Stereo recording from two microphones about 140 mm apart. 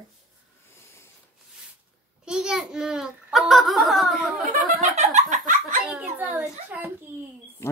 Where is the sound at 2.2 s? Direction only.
5° right (ahead or behind).